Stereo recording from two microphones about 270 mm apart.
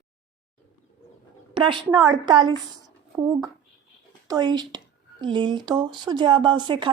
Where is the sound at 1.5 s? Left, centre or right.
Centre.